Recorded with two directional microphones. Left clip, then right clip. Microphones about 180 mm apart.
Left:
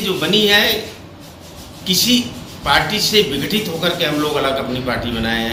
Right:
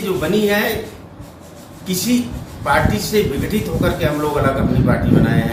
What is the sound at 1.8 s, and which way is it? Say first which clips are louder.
A man's voice: left 5 dB; 15° right (ahead or behind).